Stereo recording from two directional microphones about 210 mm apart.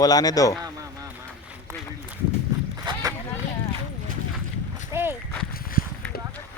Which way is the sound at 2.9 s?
20° right (ahead or behind).